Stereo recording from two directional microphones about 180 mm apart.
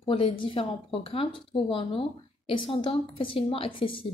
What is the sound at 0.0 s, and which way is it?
A woman's voice, 30° left (ahead or behind).